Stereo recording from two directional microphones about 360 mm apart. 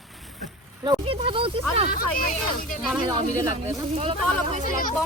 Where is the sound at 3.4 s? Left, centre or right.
Centre.